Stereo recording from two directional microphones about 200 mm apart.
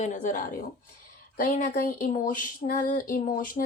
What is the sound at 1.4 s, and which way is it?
Female singing, 45° left (ahead or behind).